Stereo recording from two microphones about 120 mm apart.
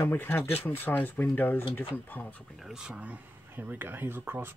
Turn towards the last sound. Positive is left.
turn(degrees=-15)  # may be behind; listen again after turning